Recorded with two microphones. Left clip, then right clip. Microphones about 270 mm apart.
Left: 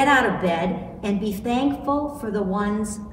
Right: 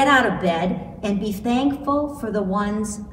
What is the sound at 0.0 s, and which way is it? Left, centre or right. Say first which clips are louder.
A woman's voice: right 1 dB; centre.